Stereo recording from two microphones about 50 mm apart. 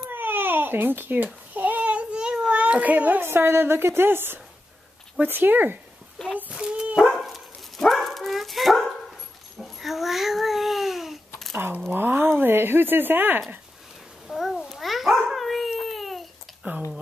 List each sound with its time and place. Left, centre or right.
0.1 s babbling: right
2.1 s a sound: centre
2.5 s a child's voice: right
3.2 s a woman's voice: right
6.2 s a child's voice: centre
6.5 s dog: centre
7.2 s dog: centre
9.6 s babbling: centre
11.9 s a sound: right
14.2 s babbling: centre
16.6 s a sound: right